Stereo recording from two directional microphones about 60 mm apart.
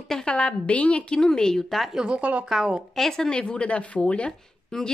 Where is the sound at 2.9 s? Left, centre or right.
Centre.